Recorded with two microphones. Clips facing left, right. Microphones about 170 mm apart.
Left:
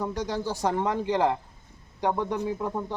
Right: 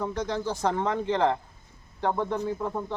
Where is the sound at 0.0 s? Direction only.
10° left (ahead or behind).